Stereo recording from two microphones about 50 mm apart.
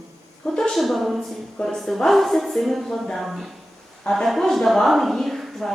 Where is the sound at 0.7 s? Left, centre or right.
Centre.